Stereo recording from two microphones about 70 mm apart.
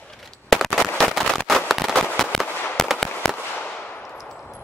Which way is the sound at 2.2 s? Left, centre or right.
Centre.